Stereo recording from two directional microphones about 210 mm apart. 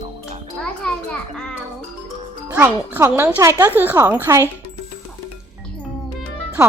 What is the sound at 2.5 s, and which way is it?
Speech, 10° right (ahead or behind).